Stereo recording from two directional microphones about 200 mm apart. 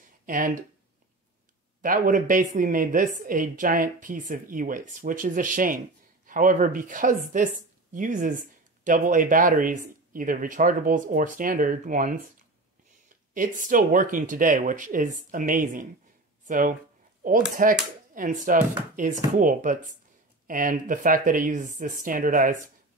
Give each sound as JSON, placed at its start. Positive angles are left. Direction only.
{"t": 0.3, "sound": "speech", "side_deg": -40}
{"t": 1.8, "sound": "speech", "side_deg": -40}
{"t": 13.3, "sound": "speech", "side_deg": -40}